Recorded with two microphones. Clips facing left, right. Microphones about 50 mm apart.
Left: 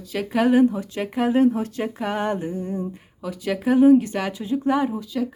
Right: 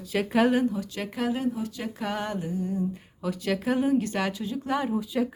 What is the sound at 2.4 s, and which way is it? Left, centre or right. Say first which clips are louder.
Speech: left 2 dB; left.